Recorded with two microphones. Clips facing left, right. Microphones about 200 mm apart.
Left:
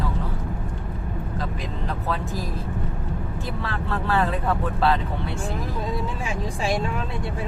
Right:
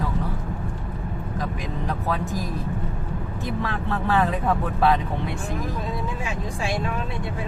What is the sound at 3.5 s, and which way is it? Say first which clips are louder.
Vehicle: right 3 dB; 15° right (ahead or behind).